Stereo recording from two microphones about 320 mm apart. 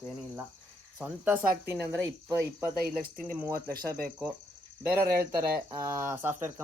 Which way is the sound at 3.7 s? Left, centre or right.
Right.